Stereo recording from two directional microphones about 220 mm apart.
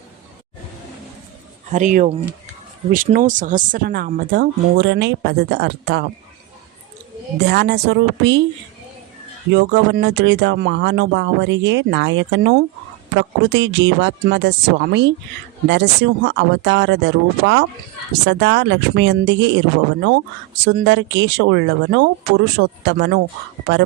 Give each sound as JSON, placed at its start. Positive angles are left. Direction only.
{"t": 1.7, "sound": "speech", "side_deg": -35}
{"t": 7.4, "sound": "speech", "side_deg": -50}
{"t": 9.5, "sound": "speech", "side_deg": -50}
{"t": 20.7, "sound": "speech", "side_deg": -55}